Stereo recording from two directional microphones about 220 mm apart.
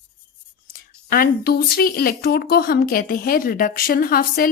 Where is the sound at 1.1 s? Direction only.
45° left (ahead or behind).